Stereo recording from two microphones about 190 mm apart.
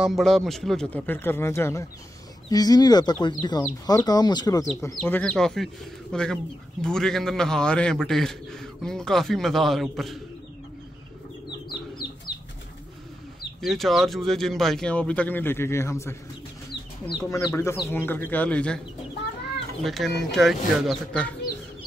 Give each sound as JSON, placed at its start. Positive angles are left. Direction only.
{"t": 0.0, "sound": "a man's voice", "side_deg": 0}
{"t": 13.6, "sound": "a man's voice", "side_deg": 0}
{"t": 17.3, "sound": "speech", "side_deg": 15}
{"t": 19.8, "sound": "a man's voice", "side_deg": 0}